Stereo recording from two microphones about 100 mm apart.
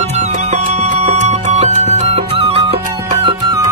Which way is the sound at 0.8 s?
90° right.